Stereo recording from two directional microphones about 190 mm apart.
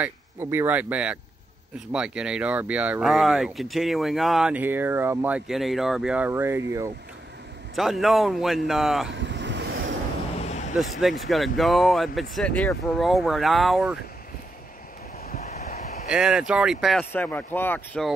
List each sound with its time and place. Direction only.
0.0 s speech: 15° right (ahead or behind)
7.7 s speech: centre (ahead or behind)
9.1 s vehicle: 70° right (ahead or behind)
10.4 s a sound: 35° left (ahead or behind)
10.8 s speech: centre (ahead or behind)
15.2 s vehicle: 40° left (ahead or behind)
16.1 s speech: 5° right (ahead or behind)
17.1 s speech: 10° left (ahead or behind)